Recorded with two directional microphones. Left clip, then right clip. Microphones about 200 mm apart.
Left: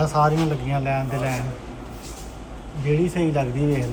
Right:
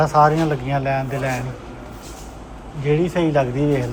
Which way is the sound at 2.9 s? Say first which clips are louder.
Right 4 dB; 15° right (ahead or behind).